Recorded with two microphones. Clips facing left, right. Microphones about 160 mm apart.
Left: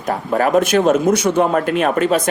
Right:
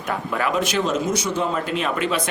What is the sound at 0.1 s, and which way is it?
Speech, 40° left (ahead or behind).